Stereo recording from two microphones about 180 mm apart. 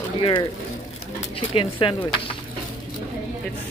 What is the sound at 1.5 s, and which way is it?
Speech, 30° left (ahead or behind).